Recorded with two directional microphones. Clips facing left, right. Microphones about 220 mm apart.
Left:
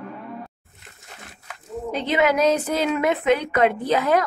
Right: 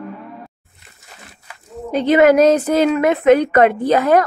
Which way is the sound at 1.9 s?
45° right (ahead or behind).